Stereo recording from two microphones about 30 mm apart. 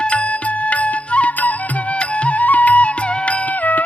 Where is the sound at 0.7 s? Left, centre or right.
Left.